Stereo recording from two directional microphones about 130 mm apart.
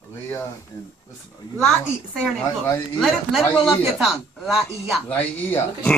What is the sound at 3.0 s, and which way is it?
A man's voice, centre (ahead or behind).